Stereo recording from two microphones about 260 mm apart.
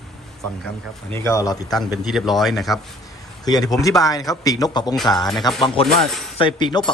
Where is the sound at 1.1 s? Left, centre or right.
Centre.